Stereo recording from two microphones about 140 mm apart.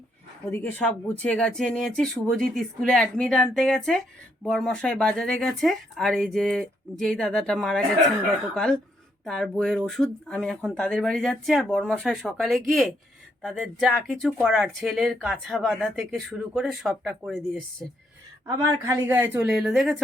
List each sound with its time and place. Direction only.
0.5 s speech: 15° left (ahead or behind)
18.4 s a woman's voice: 20° right (ahead or behind)
19.5 s speech: centre (ahead or behind)